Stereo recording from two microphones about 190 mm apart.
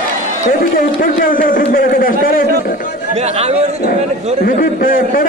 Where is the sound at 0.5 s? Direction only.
50° left (ahead or behind).